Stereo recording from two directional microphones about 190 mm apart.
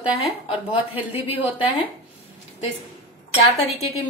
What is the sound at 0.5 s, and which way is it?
Speech, 10° right (ahead or behind).